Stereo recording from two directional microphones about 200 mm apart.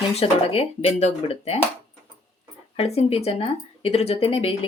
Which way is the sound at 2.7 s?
30° left (ahead or behind).